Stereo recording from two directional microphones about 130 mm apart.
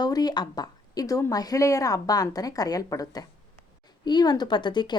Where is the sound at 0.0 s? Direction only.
30° left (ahead or behind).